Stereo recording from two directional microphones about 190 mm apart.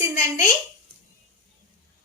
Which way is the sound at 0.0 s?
15° right (ahead or behind).